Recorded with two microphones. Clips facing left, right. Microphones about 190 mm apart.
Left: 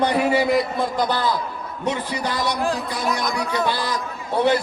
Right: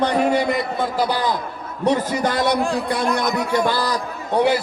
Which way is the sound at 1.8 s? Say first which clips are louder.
Right 6 dB; 45° right (ahead or behind).